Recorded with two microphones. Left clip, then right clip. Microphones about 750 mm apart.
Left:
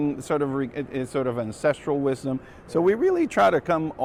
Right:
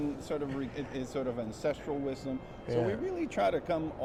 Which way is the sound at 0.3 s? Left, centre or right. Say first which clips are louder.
Left 11 dB; left.